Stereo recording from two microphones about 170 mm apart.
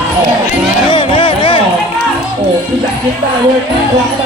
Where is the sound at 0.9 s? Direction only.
30° left (ahead or behind).